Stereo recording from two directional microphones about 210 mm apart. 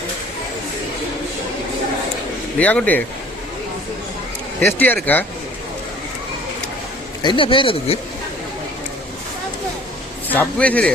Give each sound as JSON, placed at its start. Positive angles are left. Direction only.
{"t": 2.6, "sound": "a man's voice", "side_deg": 5}
{"t": 4.6, "sound": "a man's voice", "side_deg": 10}
{"t": 7.2, "sound": "speech", "side_deg": 20}
{"t": 10.2, "sound": "a man's voice", "side_deg": 5}